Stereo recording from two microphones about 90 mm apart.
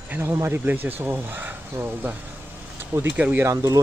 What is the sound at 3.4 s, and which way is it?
Speech, 35° right (ahead or behind).